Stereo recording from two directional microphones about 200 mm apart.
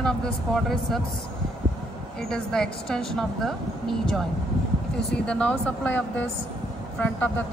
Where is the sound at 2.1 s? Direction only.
5° left (ahead or behind).